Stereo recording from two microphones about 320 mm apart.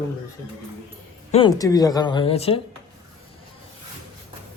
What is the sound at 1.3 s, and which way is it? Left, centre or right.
A man's voice, centre.